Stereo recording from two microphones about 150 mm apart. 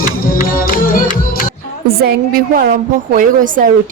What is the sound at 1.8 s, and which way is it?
A woman's voice, 85° right.